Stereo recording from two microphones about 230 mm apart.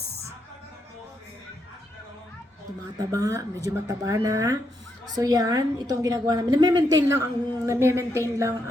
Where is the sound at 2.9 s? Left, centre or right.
Centre.